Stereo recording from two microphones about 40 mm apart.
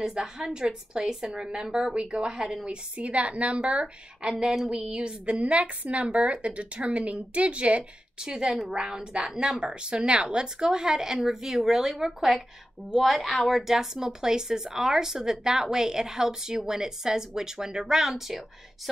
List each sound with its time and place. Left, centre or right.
0.2 s a woman's voice: right
8.2 s a woman's voice: centre